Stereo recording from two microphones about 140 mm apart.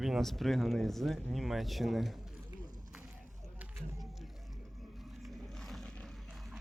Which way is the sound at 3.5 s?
20° right (ahead or behind).